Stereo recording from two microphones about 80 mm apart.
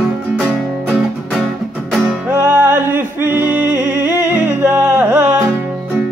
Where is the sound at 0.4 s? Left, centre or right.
Centre.